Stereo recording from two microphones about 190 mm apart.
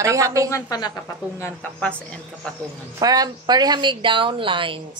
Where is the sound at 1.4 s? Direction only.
10° left (ahead or behind).